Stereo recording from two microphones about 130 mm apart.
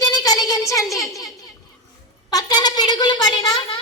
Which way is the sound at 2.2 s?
30° left (ahead or behind).